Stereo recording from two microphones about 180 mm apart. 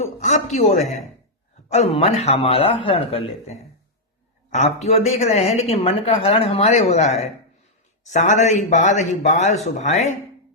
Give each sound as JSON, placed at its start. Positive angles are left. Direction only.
{"t": 0.0, "sound": "speech", "side_deg": 40}